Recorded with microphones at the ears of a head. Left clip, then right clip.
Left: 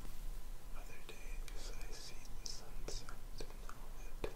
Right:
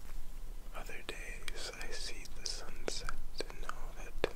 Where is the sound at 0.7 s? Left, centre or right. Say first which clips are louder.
Right 11 dB; right.